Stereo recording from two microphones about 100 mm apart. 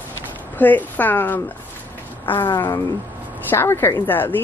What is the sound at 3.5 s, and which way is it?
Speech, 25° left (ahead or behind).